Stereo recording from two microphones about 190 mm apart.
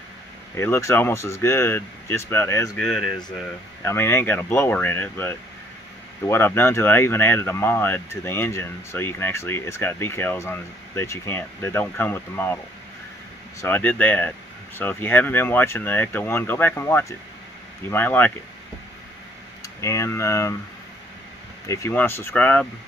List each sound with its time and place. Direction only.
0.6 s speech: 15° left (ahead or behind)
2.8 s speech: centre (ahead or behind)
3.8 s speech: 10° left (ahead or behind)
13.6 s speech: 10° left (ahead or behind)
19.6 s speech: 15° left (ahead or behind)
21.6 s speech: 15° left (ahead or behind)